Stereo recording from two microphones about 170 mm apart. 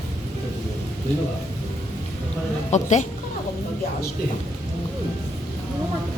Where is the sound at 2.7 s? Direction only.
45° left (ahead or behind).